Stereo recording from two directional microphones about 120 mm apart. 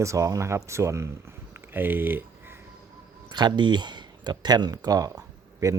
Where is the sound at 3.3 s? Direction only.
35° right (ahead or behind).